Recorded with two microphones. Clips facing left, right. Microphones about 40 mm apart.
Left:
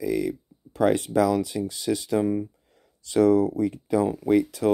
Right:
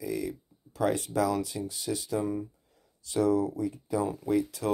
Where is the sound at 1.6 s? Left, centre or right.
Left.